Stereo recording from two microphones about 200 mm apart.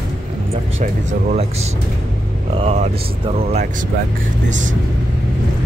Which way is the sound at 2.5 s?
30° right (ahead or behind).